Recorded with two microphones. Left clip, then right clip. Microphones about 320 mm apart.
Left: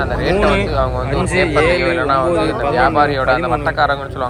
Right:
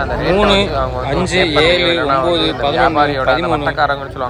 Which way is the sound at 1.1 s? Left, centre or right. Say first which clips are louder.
Right 2 dB; centre.